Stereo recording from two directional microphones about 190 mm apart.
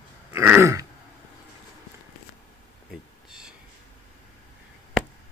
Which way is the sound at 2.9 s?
Centre (ahead or behind).